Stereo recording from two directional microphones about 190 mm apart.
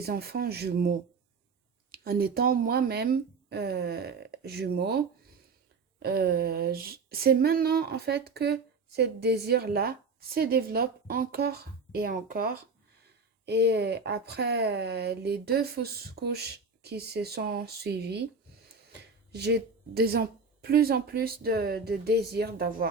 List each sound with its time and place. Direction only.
0.0 s speech: 55° right (ahead or behind)
13.4 s speech: 60° right (ahead or behind)
19.3 s speech: 60° right (ahead or behind)